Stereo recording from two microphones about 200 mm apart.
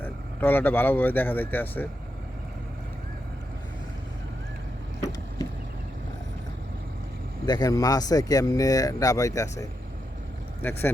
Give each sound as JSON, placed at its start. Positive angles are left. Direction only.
{"t": 0.0, "sound": "speech", "side_deg": 10}
{"t": 7.4, "sound": "speech", "side_deg": 20}